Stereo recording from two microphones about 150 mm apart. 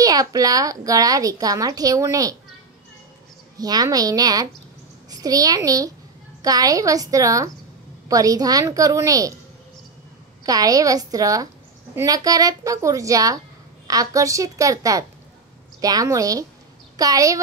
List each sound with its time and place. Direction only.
0.0 s a child's voice: 25° right (ahead or behind)
3.5 s a child's voice: 25° right (ahead or behind)
10.4 s a child's voice: 25° right (ahead or behind)